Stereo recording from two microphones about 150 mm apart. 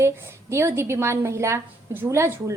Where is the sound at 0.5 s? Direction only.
15° right (ahead or behind).